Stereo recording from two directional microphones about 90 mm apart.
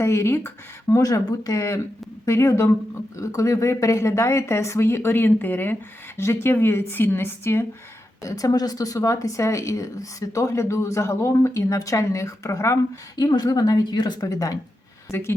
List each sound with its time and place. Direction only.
0.0 s a woman's voice: 30° left (ahead or behind)
8.2 s speech: 40° left (ahead or behind)
15.1 s a woman's voice: 25° left (ahead or behind)